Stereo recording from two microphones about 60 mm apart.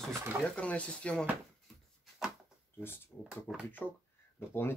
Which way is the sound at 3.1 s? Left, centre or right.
Left.